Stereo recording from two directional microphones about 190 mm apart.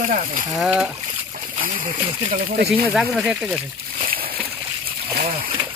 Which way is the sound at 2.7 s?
5° right (ahead or behind).